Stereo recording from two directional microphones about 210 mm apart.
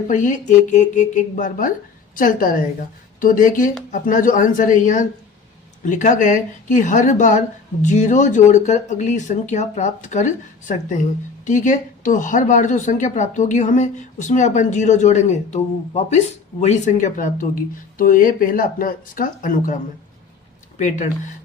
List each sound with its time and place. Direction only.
0.1 s a woman's voice: 35° left (ahead or behind)